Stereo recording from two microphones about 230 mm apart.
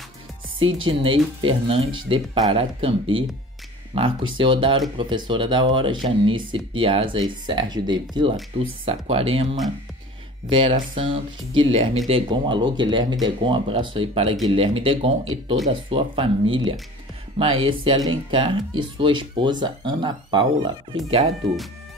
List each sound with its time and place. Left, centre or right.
0.8 s speech: right